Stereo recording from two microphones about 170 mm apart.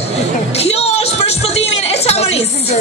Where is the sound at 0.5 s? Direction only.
35° left (ahead or behind).